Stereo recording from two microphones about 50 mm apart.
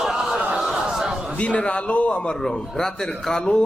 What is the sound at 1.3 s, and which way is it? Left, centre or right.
A man's voice, left.